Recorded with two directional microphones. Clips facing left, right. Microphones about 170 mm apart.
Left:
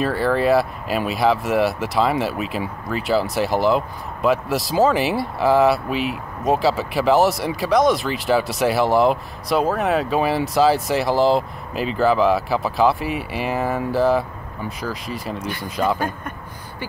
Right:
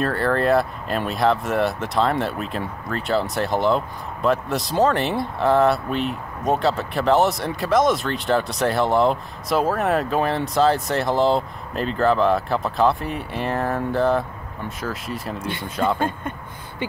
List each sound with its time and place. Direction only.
0.0 s speech: 5° left (ahead or behind)
16.0 s speech: 25° right (ahead or behind)